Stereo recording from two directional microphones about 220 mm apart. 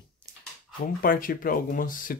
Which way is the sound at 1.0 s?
40° left (ahead or behind).